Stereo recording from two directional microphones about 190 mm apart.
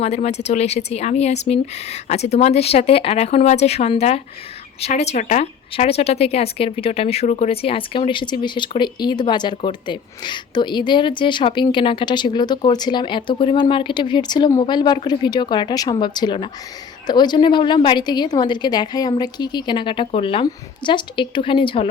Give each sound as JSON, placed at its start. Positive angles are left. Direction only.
{"t": 0.0, "sound": "speech", "side_deg": 35}